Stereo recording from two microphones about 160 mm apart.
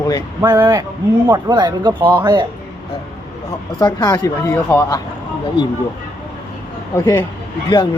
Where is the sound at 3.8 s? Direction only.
25° left (ahead or behind).